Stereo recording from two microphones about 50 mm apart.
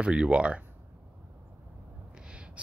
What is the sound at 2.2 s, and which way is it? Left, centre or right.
Owl, right.